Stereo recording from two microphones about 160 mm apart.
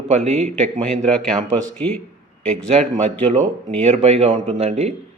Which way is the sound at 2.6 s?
40° right (ahead or behind).